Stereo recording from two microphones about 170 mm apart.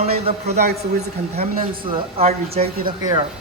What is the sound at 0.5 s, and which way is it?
Speech, 70° right (ahead or behind).